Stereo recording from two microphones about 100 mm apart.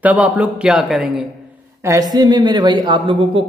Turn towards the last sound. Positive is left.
turn(degrees=-55)  # may be behind; listen again after turning